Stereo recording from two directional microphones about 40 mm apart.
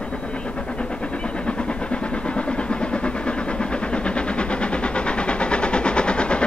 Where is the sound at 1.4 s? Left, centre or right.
Left.